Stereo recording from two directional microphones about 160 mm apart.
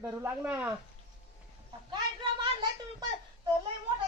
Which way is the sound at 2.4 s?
30° right (ahead or behind).